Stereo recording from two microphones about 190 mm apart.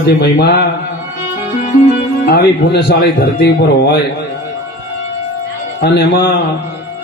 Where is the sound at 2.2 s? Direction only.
60° left (ahead or behind).